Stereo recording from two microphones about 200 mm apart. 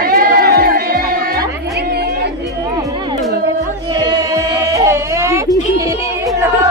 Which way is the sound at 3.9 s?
20° right (ahead or behind).